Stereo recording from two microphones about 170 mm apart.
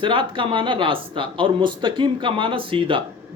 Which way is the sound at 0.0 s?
30° right (ahead or behind).